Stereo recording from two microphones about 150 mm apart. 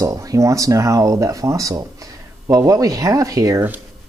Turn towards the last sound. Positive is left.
turn(degrees=-20)  # may be behind; listen again after turning